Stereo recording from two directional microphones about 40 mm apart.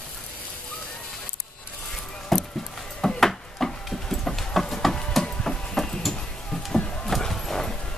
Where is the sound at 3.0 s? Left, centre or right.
Centre.